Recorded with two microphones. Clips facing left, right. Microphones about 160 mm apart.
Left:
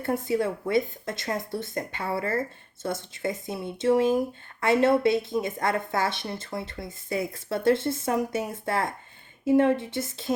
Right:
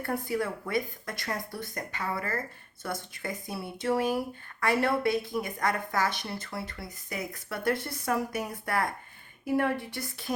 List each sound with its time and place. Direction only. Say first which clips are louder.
0.0 s a woman's voice: left 5 dB; 25° left (ahead or behind)